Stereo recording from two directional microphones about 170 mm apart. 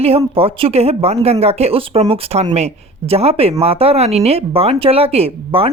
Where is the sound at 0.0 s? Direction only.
35° right (ahead or behind).